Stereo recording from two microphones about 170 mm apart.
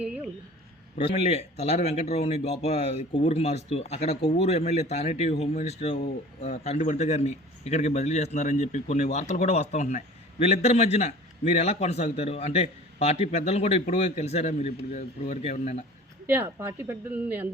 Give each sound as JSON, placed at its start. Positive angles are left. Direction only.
{"t": 0.9, "sound": "speech", "side_deg": 40}
{"t": 16.2, "sound": "a woman's voice", "side_deg": -10}